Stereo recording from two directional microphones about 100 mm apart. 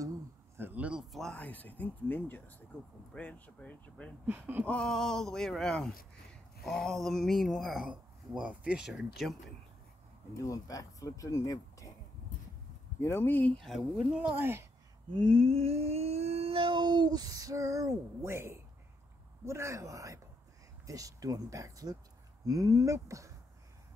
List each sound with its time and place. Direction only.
0.6 s a sound: 15° right (ahead or behind)
1.3 s speech: 15° left (ahead or behind)
4.3 s speech: 20° right (ahead or behind)
4.6 s speech: 5° left (ahead or behind)
7.8 s speech: 10° right (ahead or behind)
10.3 s speech: 35° left (ahead or behind)
13.0 s speech: 25° left (ahead or behind)
13.6 s speech: centre (ahead or behind)
14.3 s speech: 20° right (ahead or behind)
15.1 s a sound: 60° right (ahead or behind); by 18.6 s 25° right (ahead or behind)
19.4 s speech: 30° right (ahead or behind)